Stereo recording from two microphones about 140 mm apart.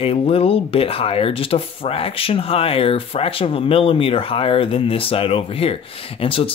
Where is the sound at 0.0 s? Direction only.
45° left (ahead or behind).